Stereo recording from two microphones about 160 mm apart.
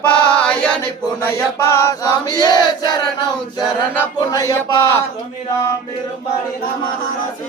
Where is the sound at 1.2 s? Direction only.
15° left (ahead or behind).